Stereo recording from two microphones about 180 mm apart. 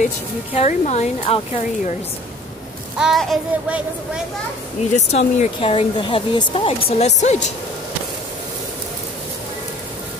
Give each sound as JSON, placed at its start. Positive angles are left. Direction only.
{"t": 0.6, "sound": "speech", "side_deg": 40}
{"t": 3.0, "sound": "child singing", "side_deg": 0}
{"t": 4.9, "sound": "speech", "side_deg": 40}